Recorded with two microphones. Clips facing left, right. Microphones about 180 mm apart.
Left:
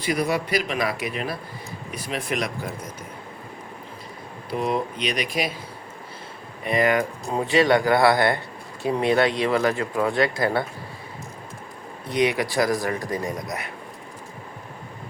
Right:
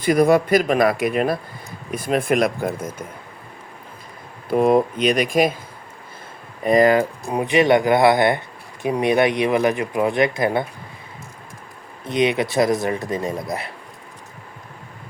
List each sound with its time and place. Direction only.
0.0 s speech: 50° right (ahead or behind)
4.4 s speech: 50° right (ahead or behind)
6.7 s speech: 35° right (ahead or behind)
7.3 s speech: 15° right (ahead or behind)
12.0 s speech: 20° right (ahead or behind)